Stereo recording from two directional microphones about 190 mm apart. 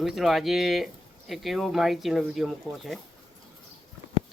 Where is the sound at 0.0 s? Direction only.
Centre (ahead or behind).